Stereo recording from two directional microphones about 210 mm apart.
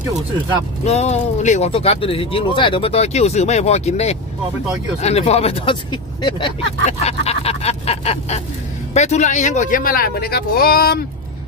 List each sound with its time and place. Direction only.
0.8 s speech: 30° left (ahead or behind)